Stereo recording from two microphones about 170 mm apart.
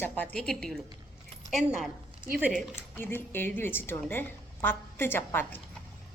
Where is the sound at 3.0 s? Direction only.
10° left (ahead or behind).